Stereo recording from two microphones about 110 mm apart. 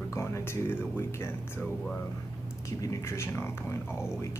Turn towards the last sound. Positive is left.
turn(degrees=25)  # may be behind; listen again after turning